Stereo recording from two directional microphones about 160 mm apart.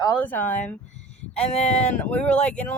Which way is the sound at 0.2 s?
10° left (ahead or behind).